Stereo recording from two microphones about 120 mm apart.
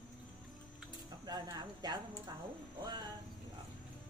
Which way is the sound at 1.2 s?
30° right (ahead or behind).